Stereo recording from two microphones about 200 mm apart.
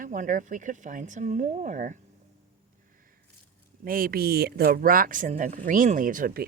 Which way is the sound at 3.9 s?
45° right (ahead or behind).